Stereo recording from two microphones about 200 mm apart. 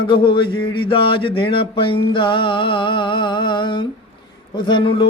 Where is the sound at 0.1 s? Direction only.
25° left (ahead or behind).